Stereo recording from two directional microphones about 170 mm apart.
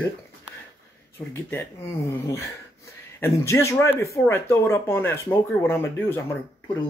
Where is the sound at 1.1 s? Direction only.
15° left (ahead or behind).